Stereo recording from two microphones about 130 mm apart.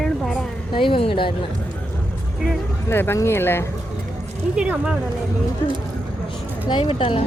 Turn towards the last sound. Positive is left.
turn(degrees=45)  # may be behind; listen again after turning